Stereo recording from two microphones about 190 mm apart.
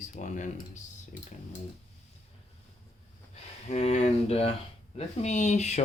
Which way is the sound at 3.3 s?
35° left (ahead or behind).